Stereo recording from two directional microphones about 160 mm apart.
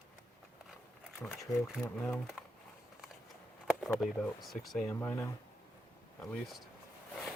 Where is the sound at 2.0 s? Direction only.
Centre (ahead or behind).